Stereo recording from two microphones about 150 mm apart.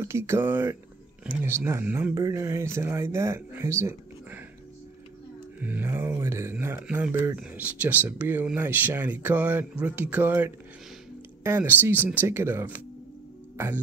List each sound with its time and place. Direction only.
0.0 s speech: 15° right (ahead or behind)
5.6 s speech: 10° right (ahead or behind)